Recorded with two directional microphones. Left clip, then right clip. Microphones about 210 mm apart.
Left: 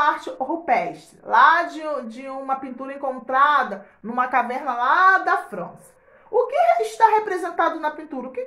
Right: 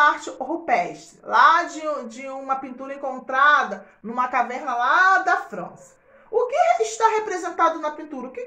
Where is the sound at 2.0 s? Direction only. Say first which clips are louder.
Even; 30° left (ahead or behind).